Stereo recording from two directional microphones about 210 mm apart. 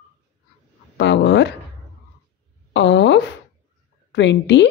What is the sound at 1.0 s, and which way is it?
Speech, 55° left (ahead or behind).